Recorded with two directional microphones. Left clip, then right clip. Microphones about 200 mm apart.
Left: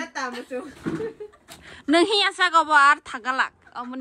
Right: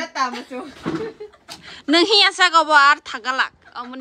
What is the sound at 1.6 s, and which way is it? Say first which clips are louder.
A woman's voice: right 3 dB; 5° right (ahead or behind).